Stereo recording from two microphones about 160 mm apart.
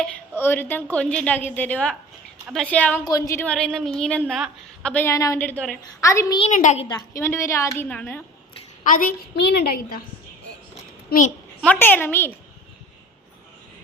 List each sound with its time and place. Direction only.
0.3 s a woman's voice: 15° left (ahead or behind)
3.0 s a woman's voice: 20° left (ahead or behind); by 4.9 s centre (ahead or behind)
4.9 s a woman's voice: 10° left (ahead or behind)
6.5 s a woman's voice: 50° left (ahead or behind)
6.8 s a woman's voice: 20° left (ahead or behind)
8.8 s a woman's voice: 60° left (ahead or behind)
11.6 s a woman's voice: 10° left (ahead or behind)